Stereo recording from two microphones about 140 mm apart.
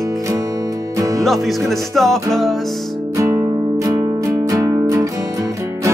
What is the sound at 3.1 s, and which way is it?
Music, 20° right (ahead or behind).